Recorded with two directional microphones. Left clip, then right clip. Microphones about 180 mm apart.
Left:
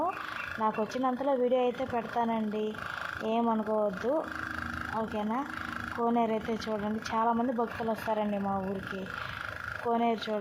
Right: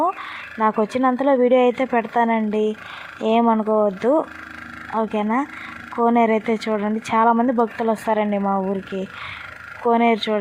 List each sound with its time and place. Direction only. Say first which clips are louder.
0.6 s speech: right 12 dB; 40° right (ahead or behind)
9.8 s speech: right 12 dB; 40° right (ahead or behind)